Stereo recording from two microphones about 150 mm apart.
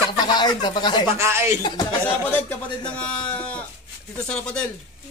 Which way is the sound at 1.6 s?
30° left (ahead or behind).